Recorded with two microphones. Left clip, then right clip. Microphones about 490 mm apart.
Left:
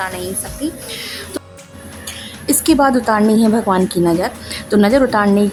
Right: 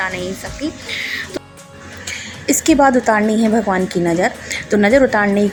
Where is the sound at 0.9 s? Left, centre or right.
Left.